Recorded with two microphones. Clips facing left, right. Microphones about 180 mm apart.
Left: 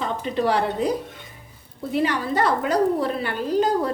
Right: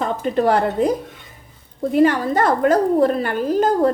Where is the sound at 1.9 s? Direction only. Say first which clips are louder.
Right 6 dB; 50° right (ahead or behind).